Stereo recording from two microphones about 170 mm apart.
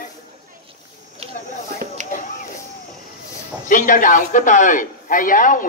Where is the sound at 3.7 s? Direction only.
50° left (ahead or behind).